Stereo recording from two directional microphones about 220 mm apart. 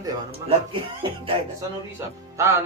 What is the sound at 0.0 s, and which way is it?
Speech, 25° right (ahead or behind).